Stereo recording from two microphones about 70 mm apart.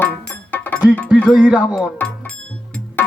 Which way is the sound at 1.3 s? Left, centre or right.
Centre.